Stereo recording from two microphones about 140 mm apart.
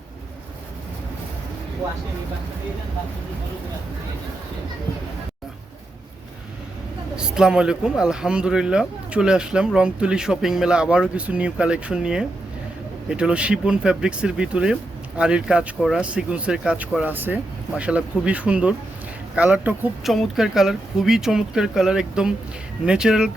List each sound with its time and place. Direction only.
7.2 s speech: 5° right (ahead or behind)